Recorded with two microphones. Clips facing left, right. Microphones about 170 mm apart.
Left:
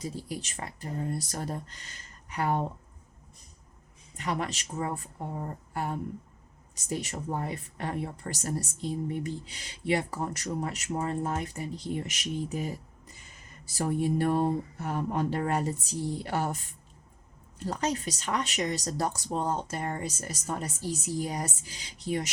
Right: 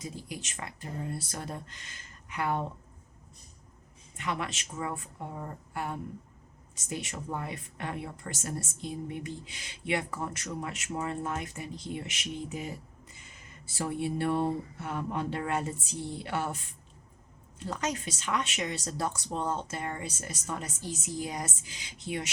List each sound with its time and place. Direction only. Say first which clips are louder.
0.0 s a woman's voice: left 4 dB; 35° left (ahead or behind)
4.2 s a woman's voice: left 2 dB; 40° left (ahead or behind)
17.6 s a woman's voice: left 3 dB; 35° left (ahead or behind)